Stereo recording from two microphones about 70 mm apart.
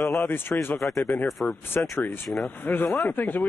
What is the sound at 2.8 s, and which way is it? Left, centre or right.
Speech, centre.